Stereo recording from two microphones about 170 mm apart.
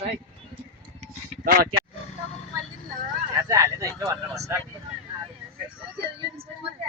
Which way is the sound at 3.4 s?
20° right (ahead or behind).